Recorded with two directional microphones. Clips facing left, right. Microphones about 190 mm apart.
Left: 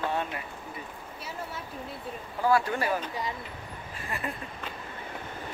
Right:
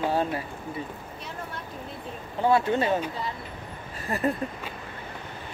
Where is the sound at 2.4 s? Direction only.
25° right (ahead or behind).